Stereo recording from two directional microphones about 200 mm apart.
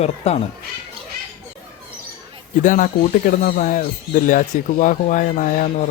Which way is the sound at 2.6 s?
40° left (ahead or behind).